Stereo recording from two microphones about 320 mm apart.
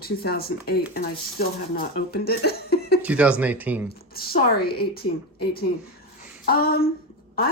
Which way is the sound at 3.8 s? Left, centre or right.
Left.